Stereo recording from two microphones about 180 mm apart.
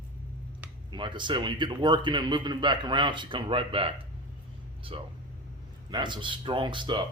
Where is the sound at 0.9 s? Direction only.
25° right (ahead or behind).